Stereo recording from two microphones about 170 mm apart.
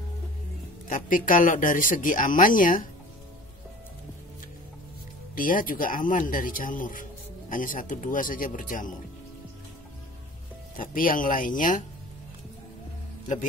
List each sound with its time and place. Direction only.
0.8 s speech: 50° left (ahead or behind)
5.3 s speech: 55° left (ahead or behind)
10.8 s speech: 55° left (ahead or behind)